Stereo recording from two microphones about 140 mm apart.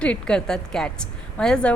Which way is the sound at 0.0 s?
5° left (ahead or behind).